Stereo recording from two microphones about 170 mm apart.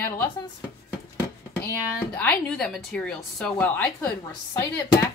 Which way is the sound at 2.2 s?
5° left (ahead or behind).